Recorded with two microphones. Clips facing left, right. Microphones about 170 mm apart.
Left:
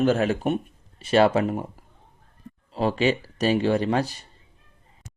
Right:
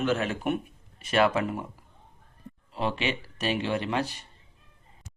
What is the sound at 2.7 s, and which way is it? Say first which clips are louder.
Speech: left 7 dB; 35° left (ahead or behind).